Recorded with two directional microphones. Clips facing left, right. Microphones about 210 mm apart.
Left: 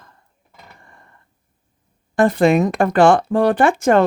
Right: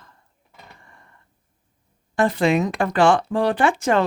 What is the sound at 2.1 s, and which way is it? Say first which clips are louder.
Speech: left 5 dB; 50° left (ahead or behind).